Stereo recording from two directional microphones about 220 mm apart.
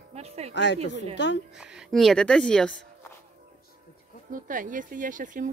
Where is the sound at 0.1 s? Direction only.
30° right (ahead or behind).